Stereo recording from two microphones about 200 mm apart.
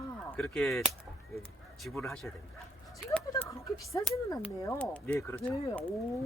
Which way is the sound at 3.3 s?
15° left (ahead or behind).